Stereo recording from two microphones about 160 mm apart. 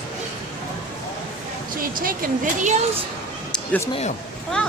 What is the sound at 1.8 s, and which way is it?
Speech, 60° right (ahead or behind).